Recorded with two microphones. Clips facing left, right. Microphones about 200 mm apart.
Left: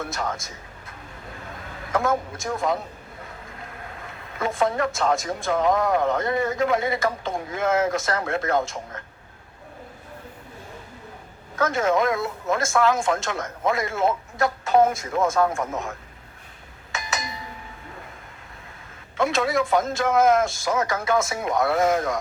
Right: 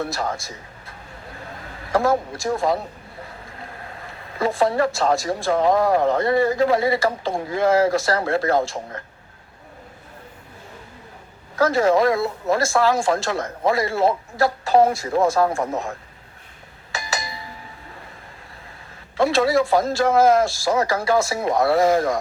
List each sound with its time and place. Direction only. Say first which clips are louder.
0.0 s speech: right 3 dB; 35° right (ahead or behind)
4.4 s speech: right 4 dB; 35° right (ahead or behind)
11.5 s speech: right 4 dB; 35° right (ahead or behind)
16.9 s a sound: right 2 dB; 30° right (ahead or behind)
19.1 s speech: right 5 dB; 35° right (ahead or behind)